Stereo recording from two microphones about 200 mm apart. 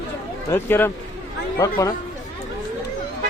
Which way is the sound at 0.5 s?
10° left (ahead or behind).